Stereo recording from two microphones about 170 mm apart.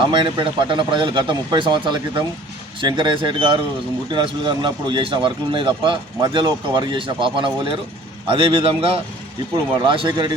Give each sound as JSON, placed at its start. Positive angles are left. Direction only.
{"t": 0.0, "sound": "a man's voice", "side_deg": -30}